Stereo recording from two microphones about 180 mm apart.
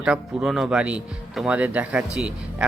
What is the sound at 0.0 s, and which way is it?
Speech, 5° right (ahead or behind).